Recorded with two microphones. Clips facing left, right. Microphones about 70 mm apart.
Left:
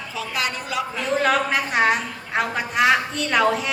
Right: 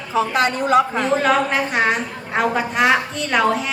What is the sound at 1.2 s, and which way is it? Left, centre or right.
A woman's voice, centre.